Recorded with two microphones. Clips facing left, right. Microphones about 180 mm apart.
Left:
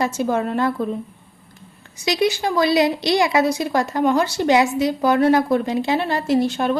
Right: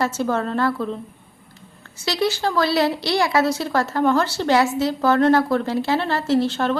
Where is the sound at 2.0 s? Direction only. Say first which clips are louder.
Left 2 dB; 15° left (ahead or behind).